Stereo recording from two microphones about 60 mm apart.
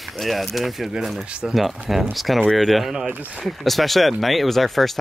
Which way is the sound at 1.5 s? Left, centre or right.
Centre.